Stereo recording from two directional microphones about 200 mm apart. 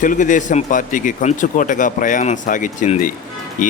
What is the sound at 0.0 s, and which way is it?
Speech, 40° left (ahead or behind).